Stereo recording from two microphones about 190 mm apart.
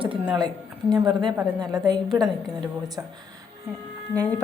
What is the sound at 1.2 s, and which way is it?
Speech, 20° right (ahead or behind).